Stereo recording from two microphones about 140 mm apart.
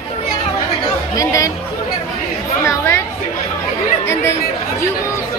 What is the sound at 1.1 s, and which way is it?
Speech, 25° left (ahead or behind).